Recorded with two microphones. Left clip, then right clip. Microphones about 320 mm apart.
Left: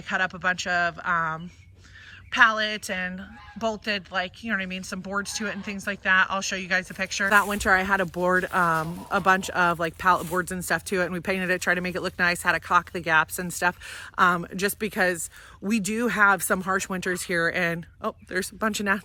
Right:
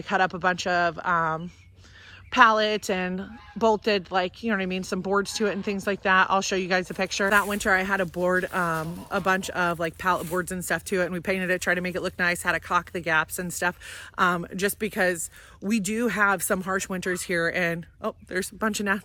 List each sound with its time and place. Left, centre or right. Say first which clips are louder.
0.1 s a woman's voice: right 2 dB; centre
7.3 s speech: left 2 dB; centre